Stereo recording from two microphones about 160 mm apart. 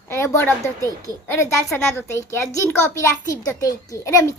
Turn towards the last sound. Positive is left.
turn(degrees=20)  # may be behind; listen again after turning